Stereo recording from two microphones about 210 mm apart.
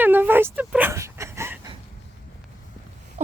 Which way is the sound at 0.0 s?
10° right (ahead or behind).